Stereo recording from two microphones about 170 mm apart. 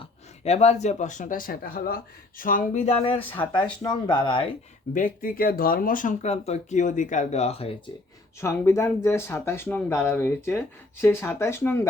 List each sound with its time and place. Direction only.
0.0 s speech: 40° left (ahead or behind)
3.5 s speech: 25° left (ahead or behind)
4.9 s speech: 55° left (ahead or behind); by 7.7 s 35° left (ahead or behind)
8.4 s speech: 15° left (ahead or behind)